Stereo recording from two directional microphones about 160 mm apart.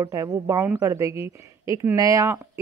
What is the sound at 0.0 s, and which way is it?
Speech, 20° right (ahead or behind).